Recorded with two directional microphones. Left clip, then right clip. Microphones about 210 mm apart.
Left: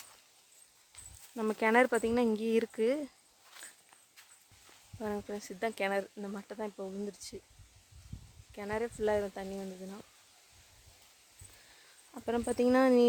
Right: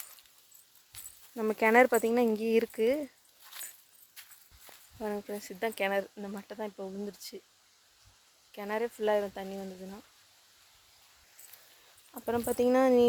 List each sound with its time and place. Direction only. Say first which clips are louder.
1.4 s speech: right 4 dB; 5° right (ahead or behind)
3.6 s biting: right 3 dB; 55° right (ahead or behind)
4.9 s speech: right 2 dB; 5° right (ahead or behind)
8.5 s speech: right 2 dB; 15° right (ahead or behind)
12.1 s speech: right 2 dB; centre (ahead or behind)